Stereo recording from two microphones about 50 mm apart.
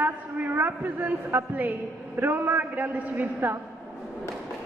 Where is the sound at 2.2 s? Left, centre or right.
Right.